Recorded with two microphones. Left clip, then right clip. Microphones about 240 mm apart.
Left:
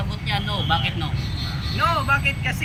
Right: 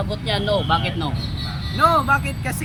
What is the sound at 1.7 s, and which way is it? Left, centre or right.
Speech, right.